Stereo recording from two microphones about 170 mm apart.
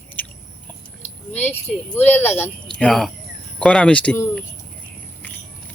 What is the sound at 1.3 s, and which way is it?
Speech, 10° left (ahead or behind).